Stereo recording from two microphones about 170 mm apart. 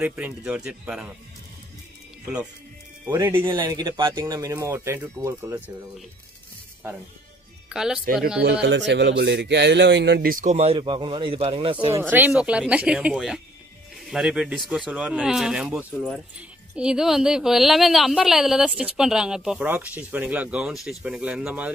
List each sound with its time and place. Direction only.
0.0 s speech: 5° right (ahead or behind)
3.1 s speech: 15° right (ahead or behind)
7.7 s speech: 5° right (ahead or behind)
8.6 s speech: 90° right; by 10.4 s 70° right (ahead or behind)
10.4 s speech: 40° right (ahead or behind)
11.9 s speech: 10° right (ahead or behind)